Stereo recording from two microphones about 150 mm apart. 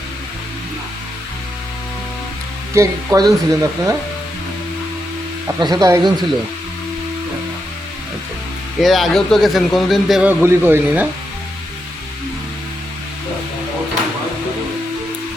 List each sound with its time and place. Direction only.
2.7 s speech: 20° right (ahead or behind)
5.5 s speech: 25° right (ahead or behind)
8.8 s a man's voice: centre (ahead or behind)